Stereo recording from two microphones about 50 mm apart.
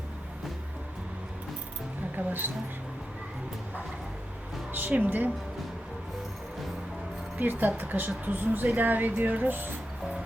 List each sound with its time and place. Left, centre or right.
2.1 s speech: right
4.7 s a woman's voice: right
7.3 s a woman's voice: right